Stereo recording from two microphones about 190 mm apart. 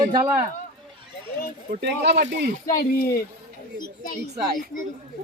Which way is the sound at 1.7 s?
60° right (ahead or behind).